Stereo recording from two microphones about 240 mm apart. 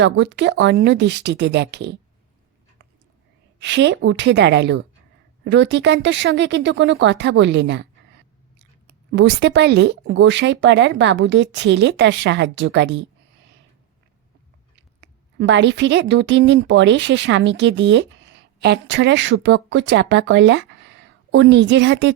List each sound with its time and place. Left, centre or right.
0.0 s speech: right
3.6 s speech: right
15.4 s speech: right